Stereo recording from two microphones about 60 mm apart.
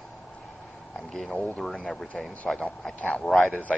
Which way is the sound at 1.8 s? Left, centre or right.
Centre.